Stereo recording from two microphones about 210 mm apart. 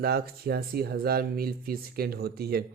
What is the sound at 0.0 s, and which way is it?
Speech, 50° right (ahead or behind).